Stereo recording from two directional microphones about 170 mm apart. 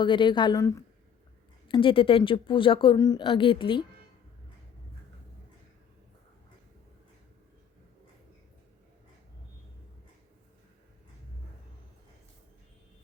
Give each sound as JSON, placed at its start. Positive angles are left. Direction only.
{"t": 0.0, "sound": "a woman's voice", "side_deg": 30}
{"t": 1.6, "sound": "a woman's voice", "side_deg": 30}